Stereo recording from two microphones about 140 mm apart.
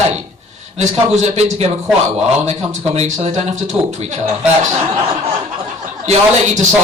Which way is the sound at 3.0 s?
50° right (ahead or behind).